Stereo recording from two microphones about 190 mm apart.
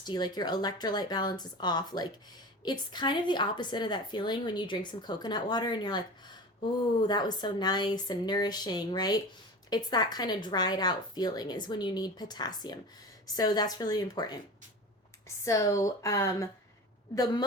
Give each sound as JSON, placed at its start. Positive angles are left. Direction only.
{"t": 0.0, "sound": "a woman's voice", "side_deg": 20}
{"t": 15.4, "sound": "speech", "side_deg": 15}